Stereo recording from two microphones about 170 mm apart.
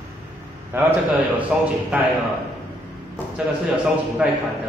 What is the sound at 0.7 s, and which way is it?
A man's voice, 15° right (ahead or behind).